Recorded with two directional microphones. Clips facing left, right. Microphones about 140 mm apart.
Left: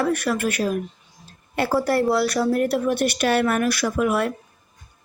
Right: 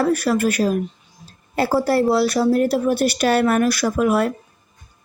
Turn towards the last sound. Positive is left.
turn(degrees=-40)  # may be behind; listen again after turning